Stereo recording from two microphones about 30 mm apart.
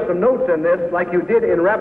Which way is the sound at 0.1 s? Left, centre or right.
Right.